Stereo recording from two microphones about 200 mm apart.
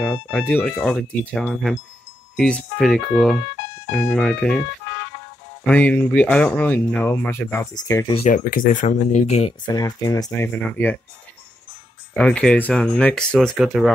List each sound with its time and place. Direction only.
0.0 s speech: 5° left (ahead or behind)
5.7 s speech: 5° left (ahead or behind); by 8.3 s 20° left (ahead or behind)
8.3 s speech: 40° left (ahead or behind)
9.7 s speech: 20° left (ahead or behind)
12.1 s speech: 5° left (ahead or behind)